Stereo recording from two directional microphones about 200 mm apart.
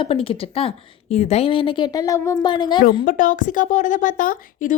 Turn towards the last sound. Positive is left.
turn(degrees=40)  # may be behind; listen again after turning